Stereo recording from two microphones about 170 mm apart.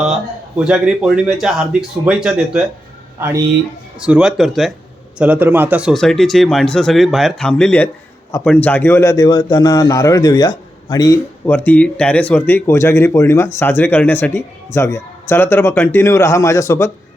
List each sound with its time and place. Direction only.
0.6 s speech: 5° right (ahead or behind)
4.0 s a man's voice: 5° right (ahead or behind)
5.9 s a man's voice: centre (ahead or behind); by 11.2 s 20° left (ahead or behind)
11.4 s speech: 10° left (ahead or behind)